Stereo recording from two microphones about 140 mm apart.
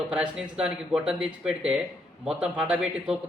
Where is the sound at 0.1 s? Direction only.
5° right (ahead or behind).